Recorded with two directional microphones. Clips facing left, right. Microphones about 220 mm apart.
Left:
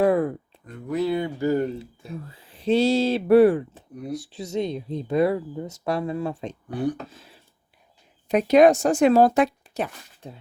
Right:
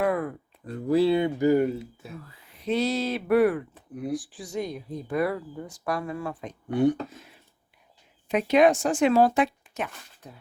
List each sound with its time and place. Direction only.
0.0 s a sound: 30° left (ahead or behind)
0.6 s speech: 30° right (ahead or behind); by 1.8 s 10° right (ahead or behind)
2.2 s speech: 30° left (ahead or behind)
6.7 s speech: 25° right (ahead or behind)
7.1 s speech: 30° left (ahead or behind)